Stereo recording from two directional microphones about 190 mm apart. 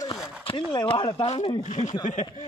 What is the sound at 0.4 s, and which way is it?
Speech, 25° left (ahead or behind).